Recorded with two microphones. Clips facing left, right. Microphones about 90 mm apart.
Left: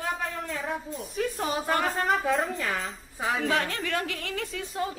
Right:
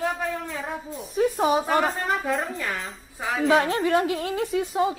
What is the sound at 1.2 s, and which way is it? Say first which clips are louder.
Speech: right 8 dB; 15° right (ahead or behind).